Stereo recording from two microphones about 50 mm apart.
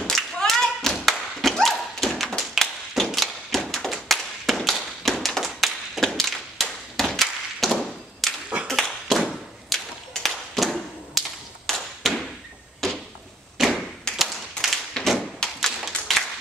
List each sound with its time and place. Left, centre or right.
0.0 s thump: centre
0.5 s tap: centre
2.6 s a sound: centre
3.2 s thump: centre
4.1 s tap: centre
6.0 s a sound: centre
8.6 s tap: centre
9.7 s a sound: centre
10.1 s tap: centre
12.8 s a sound: centre
13.6 s thump: centre
14.1 s tap: centre
15.4 s tap: centre
15.8 s clapping: centre